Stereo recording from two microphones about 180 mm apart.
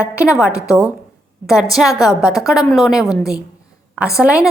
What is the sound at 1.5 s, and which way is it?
A woman's voice, centre (ahead or behind).